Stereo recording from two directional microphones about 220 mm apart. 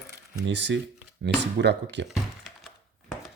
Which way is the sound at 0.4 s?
55° right (ahead or behind).